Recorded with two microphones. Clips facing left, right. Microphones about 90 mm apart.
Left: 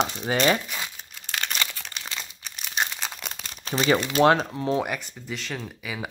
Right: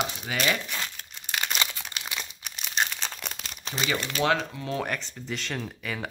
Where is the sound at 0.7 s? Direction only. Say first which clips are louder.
Even; 10° left (ahead or behind).